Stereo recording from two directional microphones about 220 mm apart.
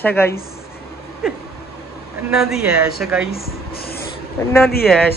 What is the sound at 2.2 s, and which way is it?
A woman's voice, centre (ahead or behind).